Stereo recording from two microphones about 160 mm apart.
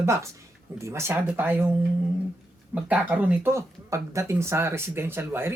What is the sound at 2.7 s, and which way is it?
Speech, 10° right (ahead or behind).